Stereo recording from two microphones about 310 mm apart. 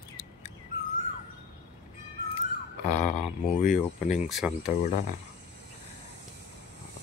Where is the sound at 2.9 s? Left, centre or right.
Left.